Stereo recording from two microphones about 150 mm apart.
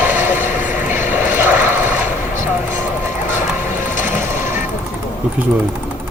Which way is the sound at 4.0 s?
55° left (ahead or behind).